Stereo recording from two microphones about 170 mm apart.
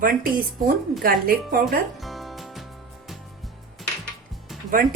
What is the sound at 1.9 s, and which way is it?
Music, centre (ahead or behind).